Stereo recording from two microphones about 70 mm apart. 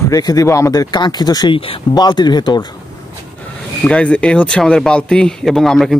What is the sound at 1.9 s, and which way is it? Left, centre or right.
Speech, left.